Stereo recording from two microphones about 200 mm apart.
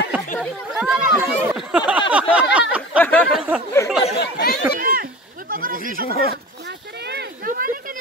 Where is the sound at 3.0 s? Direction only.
10° left (ahead or behind).